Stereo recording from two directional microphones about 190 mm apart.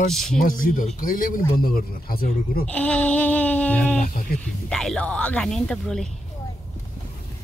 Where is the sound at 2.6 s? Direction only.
5° left (ahead or behind).